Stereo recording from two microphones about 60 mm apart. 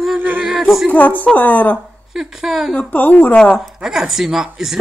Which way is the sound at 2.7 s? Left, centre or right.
Left.